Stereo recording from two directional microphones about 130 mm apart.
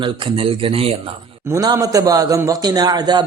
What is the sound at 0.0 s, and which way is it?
Speech, 45° right (ahead or behind).